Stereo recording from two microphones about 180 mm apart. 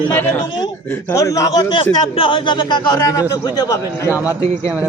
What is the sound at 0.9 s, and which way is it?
A man's voice, 15° left (ahead or behind).